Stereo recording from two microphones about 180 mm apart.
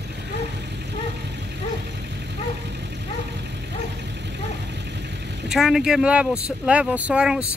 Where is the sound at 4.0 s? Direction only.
70° right (ahead or behind).